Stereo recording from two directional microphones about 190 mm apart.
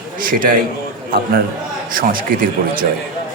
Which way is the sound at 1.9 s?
50° right (ahead or behind).